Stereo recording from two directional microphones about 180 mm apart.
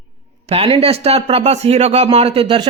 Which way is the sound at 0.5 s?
30° right (ahead or behind).